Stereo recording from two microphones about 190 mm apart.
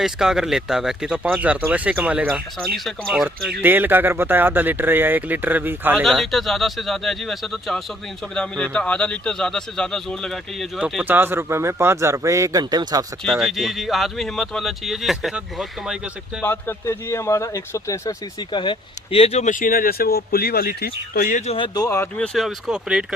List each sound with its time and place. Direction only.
0.0 s speech: 5° right (ahead or behind)
6.1 s speech: centre (ahead or behind); by 13.1 s 20° right (ahead or behind)
13.2 s speech: centre (ahead or behind)
16.4 s speech: 10° left (ahead or behind); by 21.5 s 45° left (ahead or behind)
21.5 s speech: 25° left (ahead or behind)
21.8 s speech: 15° left (ahead or behind)
22.4 s speech: centre (ahead or behind)